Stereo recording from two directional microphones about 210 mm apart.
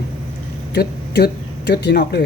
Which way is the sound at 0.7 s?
50° left (ahead or behind).